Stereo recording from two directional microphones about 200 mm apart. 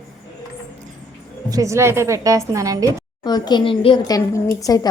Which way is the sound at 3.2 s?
20° left (ahead or behind).